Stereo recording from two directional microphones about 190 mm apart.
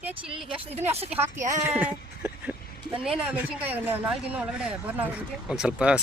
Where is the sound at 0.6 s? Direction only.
35° right (ahead or behind).